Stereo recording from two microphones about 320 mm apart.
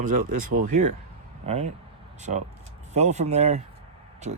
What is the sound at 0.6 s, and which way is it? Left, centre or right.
Speech, right.